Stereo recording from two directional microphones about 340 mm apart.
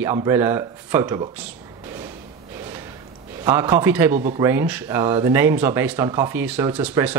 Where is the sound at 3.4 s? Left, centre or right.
Centre.